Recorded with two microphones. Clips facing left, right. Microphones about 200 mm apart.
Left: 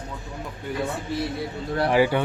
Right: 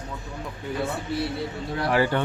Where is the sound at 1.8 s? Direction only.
15° left (ahead or behind).